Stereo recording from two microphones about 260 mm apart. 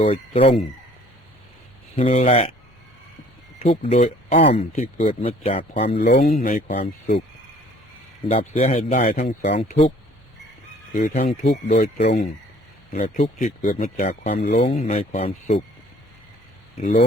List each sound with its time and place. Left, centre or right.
0.0 s speech: left
2.0 s speech: left
3.6 s speech: left
6.0 s speech: left
6.4 s speech: left
8.3 s speech: left
10.9 s speech: left
16.8 s speech: left